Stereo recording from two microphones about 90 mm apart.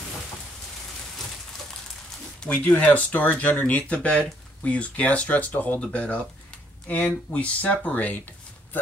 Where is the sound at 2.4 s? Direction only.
10° left (ahead or behind).